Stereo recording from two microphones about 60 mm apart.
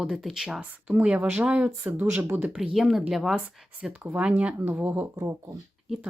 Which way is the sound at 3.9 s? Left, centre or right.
Right.